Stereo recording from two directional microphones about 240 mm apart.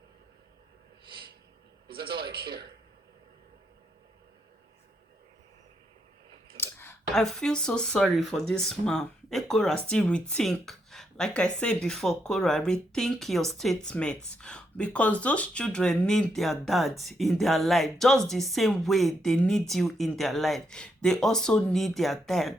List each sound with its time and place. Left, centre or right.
1.9 s speech: right
6.6 s speech: centre